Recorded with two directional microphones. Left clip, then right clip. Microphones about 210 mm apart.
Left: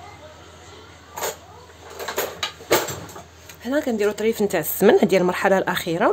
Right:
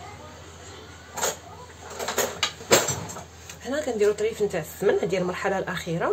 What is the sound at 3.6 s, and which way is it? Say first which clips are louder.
Speech: left 2 dB; 40° left (ahead or behind).